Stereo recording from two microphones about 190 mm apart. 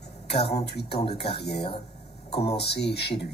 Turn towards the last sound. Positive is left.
turn(degrees=60)  # may be behind; listen again after turning